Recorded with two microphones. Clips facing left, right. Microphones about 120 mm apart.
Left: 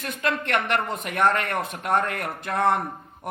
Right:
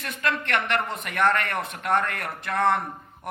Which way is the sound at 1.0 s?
40° left (ahead or behind).